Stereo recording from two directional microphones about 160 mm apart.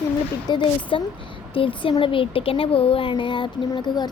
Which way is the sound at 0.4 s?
30° left (ahead or behind).